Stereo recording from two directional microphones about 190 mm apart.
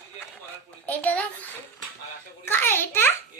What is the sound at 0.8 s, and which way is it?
A child's voice, 10° left (ahead or behind).